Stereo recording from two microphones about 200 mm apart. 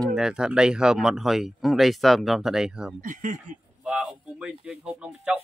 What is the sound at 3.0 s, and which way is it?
Speech, 40° right (ahead or behind).